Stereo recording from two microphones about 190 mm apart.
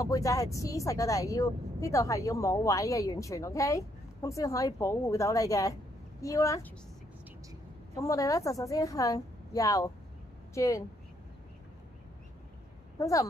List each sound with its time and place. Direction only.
0.0 s speech: 15° left (ahead or behind)
7.9 s speech: 15° left (ahead or behind)
13.0 s speech: 15° left (ahead or behind)